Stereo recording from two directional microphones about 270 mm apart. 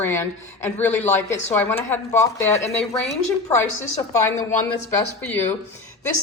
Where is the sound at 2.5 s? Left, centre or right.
Left.